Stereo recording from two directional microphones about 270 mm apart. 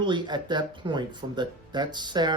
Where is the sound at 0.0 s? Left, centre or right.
Centre.